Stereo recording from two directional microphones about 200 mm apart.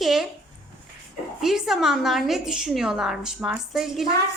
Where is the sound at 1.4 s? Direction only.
Centre (ahead or behind).